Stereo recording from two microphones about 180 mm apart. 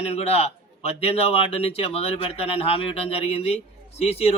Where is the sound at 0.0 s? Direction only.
35° left (ahead or behind).